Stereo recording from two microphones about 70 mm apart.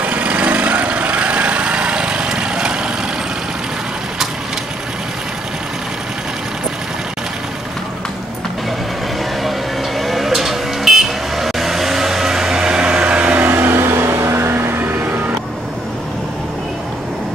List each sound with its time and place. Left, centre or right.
0.0 s lawn mower: centre
9.9 s vehicle: centre
13.5 s music: right